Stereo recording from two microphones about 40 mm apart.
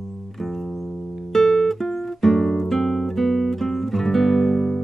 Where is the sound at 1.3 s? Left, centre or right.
Centre.